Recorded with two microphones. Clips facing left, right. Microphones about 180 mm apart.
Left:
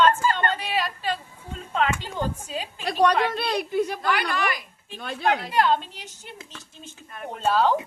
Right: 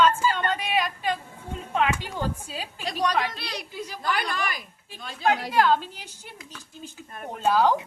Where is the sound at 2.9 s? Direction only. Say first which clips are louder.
Left 5 dB; 55° left (ahead or behind).